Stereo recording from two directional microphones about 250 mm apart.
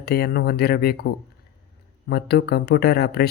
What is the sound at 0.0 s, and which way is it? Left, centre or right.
Speech, left.